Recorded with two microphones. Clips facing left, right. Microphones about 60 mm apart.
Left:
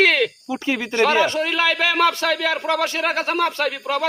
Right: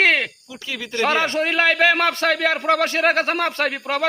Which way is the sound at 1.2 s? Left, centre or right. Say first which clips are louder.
Even; right.